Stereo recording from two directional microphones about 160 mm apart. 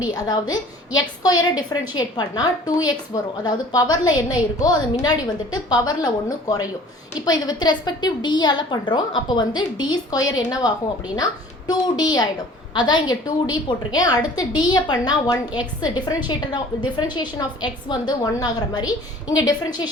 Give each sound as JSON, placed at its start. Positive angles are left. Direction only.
{"t": 0.1, "sound": "a woman's voice", "side_deg": 25}